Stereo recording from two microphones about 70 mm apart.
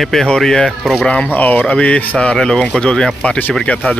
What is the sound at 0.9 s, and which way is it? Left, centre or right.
Speech, centre.